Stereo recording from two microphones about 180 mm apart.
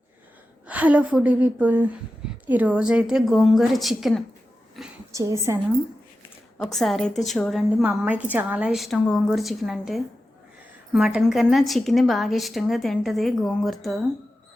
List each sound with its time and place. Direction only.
0.7 s a woman's voice: 10° right (ahead or behind)
4.8 s a sound: centre (ahead or behind)
5.1 s a woman's voice: 15° right (ahead or behind)
6.7 s a woman's voice: centre (ahead or behind)
7.9 s a woman's voice: 10° right (ahead or behind)